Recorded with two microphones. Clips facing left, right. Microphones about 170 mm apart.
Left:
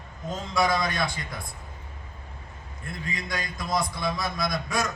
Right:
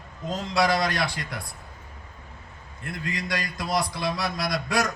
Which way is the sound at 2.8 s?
75° right (ahead or behind).